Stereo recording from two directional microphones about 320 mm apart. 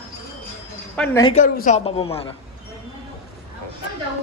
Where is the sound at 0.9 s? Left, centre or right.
Centre.